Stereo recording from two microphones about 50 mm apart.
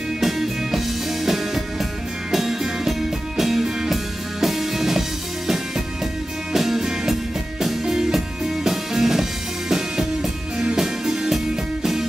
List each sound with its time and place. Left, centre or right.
0.2 s music: centre
6.5 s music: centre